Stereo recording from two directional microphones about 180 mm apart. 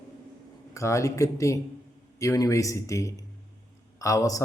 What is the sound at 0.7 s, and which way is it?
Speech, 15° left (ahead or behind).